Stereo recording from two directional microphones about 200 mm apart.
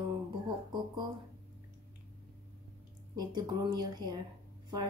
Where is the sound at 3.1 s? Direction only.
20° right (ahead or behind).